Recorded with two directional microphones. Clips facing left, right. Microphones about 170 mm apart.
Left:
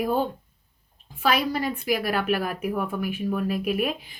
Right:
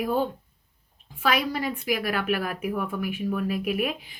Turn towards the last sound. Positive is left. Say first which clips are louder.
# left 1 dB
turn(degrees=35)  # may be behind; listen again after turning